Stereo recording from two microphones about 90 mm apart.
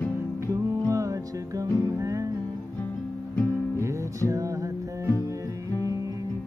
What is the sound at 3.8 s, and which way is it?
Music, 35° right (ahead or behind).